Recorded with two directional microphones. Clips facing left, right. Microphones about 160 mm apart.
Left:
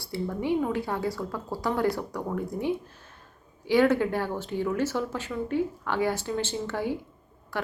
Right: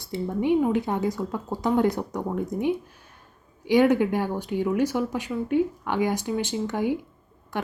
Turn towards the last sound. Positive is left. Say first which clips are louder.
# right 2 dB
turn(degrees=-20)  # may be behind; listen again after turning